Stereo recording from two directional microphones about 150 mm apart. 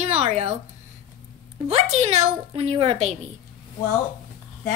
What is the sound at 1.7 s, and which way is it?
A woman's voice, 45° right (ahead or behind).